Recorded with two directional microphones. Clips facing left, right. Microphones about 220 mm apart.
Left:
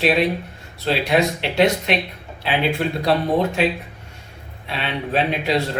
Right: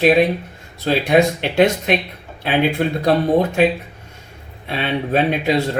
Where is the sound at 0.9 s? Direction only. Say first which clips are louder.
Right 4 dB; 50° right (ahead or behind).